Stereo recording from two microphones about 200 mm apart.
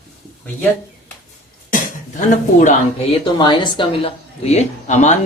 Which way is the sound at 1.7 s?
40° left (ahead or behind).